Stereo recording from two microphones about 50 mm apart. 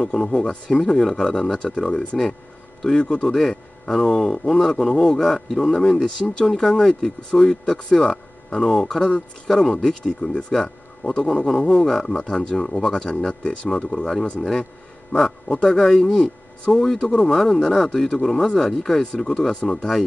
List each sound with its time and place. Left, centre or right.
0.0 s speech: centre
3.3 s speech: centre
12.2 s speech: centre
13.1 s speech: left
17.3 s speech: centre